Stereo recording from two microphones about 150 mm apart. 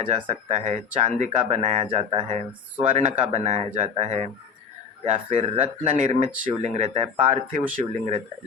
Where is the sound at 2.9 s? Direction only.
50° right (ahead or behind).